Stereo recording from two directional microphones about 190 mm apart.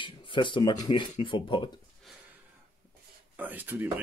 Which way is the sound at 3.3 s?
10° right (ahead or behind).